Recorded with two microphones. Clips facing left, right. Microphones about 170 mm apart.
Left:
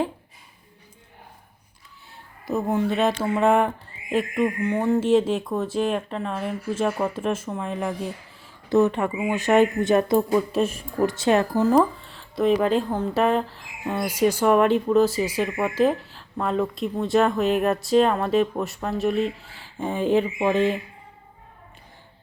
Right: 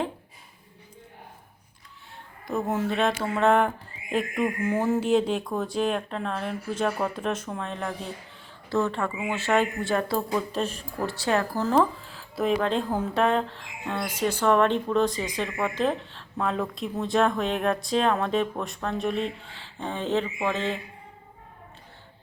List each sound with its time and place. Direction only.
2.5 s speech: centre (ahead or behind)
8.7 s speech: 15° left (ahead or behind)
11.1 s speech: 20° left (ahead or behind)
11.7 s speech: centre (ahead or behind)